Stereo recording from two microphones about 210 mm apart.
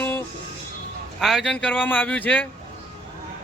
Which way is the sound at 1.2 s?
Centre (ahead or behind).